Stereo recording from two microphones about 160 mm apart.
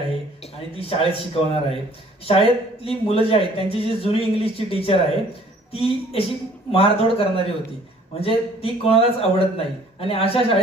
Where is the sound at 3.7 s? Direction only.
35° left (ahead or behind).